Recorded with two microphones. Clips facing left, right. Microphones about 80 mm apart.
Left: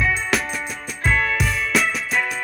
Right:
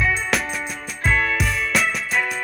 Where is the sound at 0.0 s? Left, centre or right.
Centre.